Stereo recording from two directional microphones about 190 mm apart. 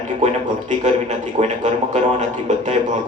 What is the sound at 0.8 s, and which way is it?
A man's voice, 40° right (ahead or behind).